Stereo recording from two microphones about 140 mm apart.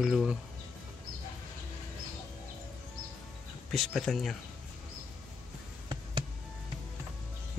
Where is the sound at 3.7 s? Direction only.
Centre (ahead or behind).